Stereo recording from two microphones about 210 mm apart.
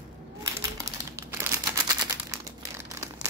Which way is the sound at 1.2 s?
15° right (ahead or behind).